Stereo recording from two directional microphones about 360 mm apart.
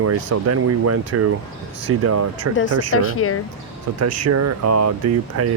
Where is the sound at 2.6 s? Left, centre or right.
Left.